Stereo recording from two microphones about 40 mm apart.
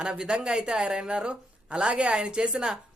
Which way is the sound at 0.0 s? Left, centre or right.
Right.